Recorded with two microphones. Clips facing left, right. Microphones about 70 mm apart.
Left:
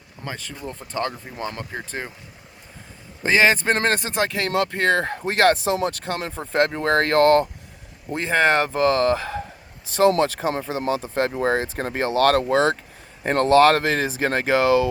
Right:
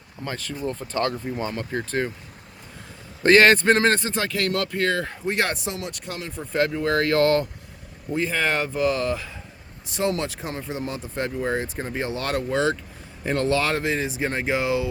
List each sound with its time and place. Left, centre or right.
0.3 s speech: centre
3.2 s speech: centre
3.8 s speech: left
4.7 s speech: left
6.5 s speech: left
8.1 s speech: left
10.7 s speech: left
11.1 s speech: left
13.2 s speech: left